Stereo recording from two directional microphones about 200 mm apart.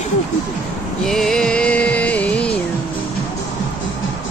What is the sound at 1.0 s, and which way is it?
Music, centre (ahead or behind).